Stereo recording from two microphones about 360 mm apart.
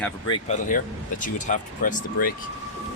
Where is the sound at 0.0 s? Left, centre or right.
Centre.